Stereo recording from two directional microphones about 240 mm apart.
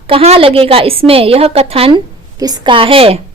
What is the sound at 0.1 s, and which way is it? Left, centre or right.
Speech, right.